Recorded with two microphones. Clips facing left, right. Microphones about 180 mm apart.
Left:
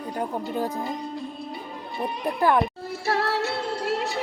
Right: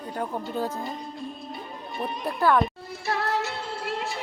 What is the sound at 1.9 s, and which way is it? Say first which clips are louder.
Speech: left 2 dB; 15° left (ahead or behind).